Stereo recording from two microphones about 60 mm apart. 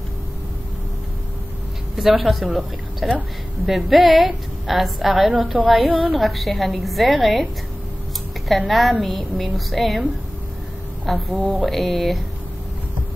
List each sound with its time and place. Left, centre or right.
2.0 s a woman's voice: centre
5.9 s a woman's voice: right
6.1 s a woman's voice: centre
8.5 s a woman's voice: centre
11.1 s a woman's voice: centre